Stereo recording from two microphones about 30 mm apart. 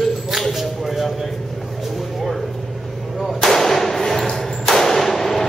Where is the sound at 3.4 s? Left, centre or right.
Centre.